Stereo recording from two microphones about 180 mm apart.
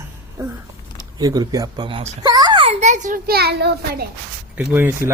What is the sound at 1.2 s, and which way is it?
A child's voice, 20° right (ahead or behind).